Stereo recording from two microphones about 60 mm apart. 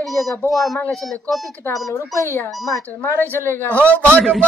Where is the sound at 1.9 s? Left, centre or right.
Left.